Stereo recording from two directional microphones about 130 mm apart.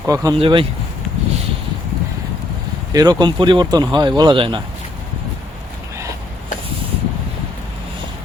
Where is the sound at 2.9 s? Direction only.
30° right (ahead or behind).